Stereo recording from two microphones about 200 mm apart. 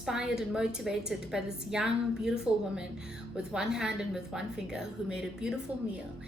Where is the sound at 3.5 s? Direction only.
5° right (ahead or behind).